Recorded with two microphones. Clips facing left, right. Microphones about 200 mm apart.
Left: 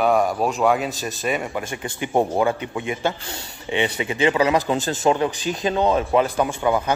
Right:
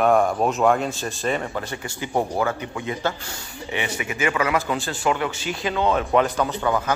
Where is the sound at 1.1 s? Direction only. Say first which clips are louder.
Even; 15° left (ahead or behind); by 4.9 s 35° left (ahead or behind).